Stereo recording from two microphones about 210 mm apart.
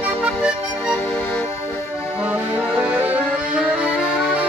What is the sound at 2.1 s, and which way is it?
Accordion, 5° right (ahead or behind).